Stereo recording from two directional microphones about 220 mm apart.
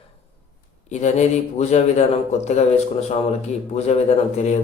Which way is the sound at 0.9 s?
30° left (ahead or behind).